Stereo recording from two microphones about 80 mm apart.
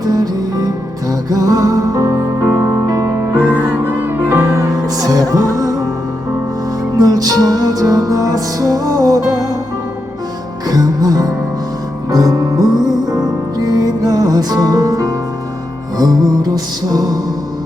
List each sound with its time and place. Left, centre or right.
0.0 s music: right
3.5 s music: right
4.3 s music: right
6.9 s music: right
10.7 s music: right